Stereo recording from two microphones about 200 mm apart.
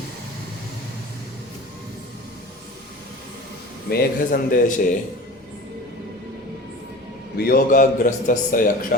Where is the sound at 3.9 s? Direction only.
50° left (ahead or behind).